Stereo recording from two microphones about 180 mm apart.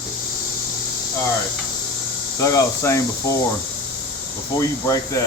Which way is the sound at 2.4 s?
15° left (ahead or behind).